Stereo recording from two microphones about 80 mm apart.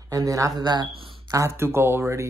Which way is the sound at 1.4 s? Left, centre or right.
Right.